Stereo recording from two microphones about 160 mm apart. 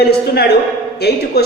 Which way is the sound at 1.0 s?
90° left.